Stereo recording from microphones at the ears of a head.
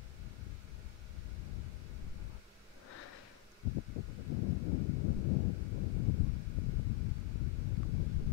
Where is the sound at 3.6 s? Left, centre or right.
Left.